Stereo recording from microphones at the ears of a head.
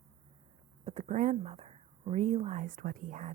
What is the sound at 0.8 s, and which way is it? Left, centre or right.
A woman's voice, right.